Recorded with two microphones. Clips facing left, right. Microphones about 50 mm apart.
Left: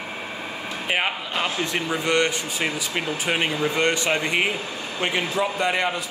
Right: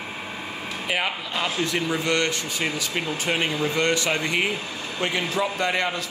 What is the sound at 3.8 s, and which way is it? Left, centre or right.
Speech, left.